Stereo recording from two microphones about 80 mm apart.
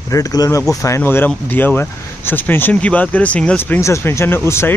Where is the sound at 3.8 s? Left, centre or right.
Left.